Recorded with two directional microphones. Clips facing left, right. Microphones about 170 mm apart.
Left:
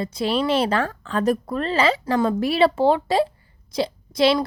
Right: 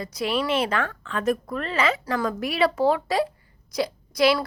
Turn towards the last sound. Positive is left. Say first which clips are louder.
# left 2 dB
turn(degrees=25)  # may be behind; listen again after turning